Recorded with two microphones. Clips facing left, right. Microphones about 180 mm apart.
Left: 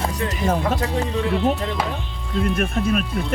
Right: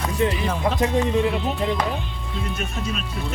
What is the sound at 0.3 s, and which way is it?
Speech, 45° left (ahead or behind).